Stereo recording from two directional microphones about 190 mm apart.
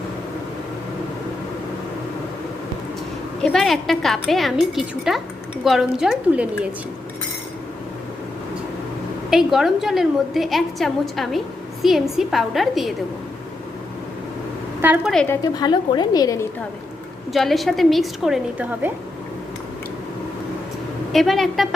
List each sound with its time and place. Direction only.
3.4 s a woman's voice: centre (ahead or behind)
9.3 s a woman's voice: centre (ahead or behind)
14.8 s a woman's voice: 10° right (ahead or behind)
15.1 s a woman's voice: 5° left (ahead or behind)
15.5 s a woman's voice: 20° left (ahead or behind)
17.3 s a woman's voice: centre (ahead or behind)
21.1 s a woman's voice: centre (ahead or behind)